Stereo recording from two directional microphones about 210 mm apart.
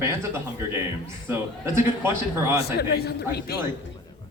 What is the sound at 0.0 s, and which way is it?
A man's voice, 10° right (ahead or behind).